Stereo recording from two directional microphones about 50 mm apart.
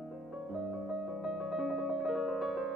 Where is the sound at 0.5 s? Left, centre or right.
Centre.